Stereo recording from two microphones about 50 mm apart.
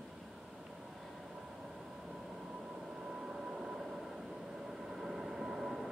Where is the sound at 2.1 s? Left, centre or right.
Centre.